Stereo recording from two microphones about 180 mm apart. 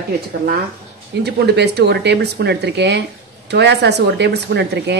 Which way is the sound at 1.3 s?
65° right (ahead or behind).